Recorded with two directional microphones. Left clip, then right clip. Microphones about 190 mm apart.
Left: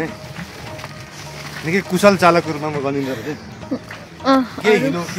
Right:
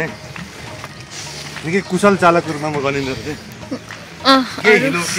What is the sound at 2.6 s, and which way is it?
Speech, 40° right (ahead or behind).